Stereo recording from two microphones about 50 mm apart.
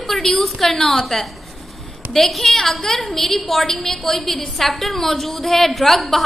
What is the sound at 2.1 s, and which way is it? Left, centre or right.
A woman's voice, centre.